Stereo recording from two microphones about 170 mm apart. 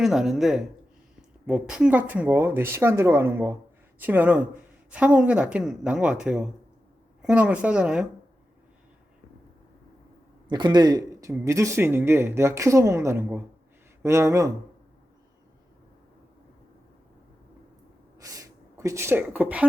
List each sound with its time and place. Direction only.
0.0 s speech: centre (ahead or behind)
10.5 s speech: 25° right (ahead or behind)
18.2 s speech: 20° right (ahead or behind)